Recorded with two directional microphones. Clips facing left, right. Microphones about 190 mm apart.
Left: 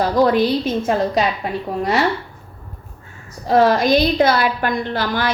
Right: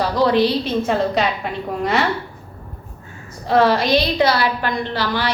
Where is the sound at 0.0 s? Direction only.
50° left (ahead or behind).